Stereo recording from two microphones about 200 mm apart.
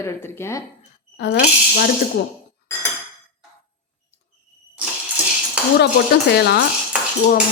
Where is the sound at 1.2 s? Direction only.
60° left (ahead or behind).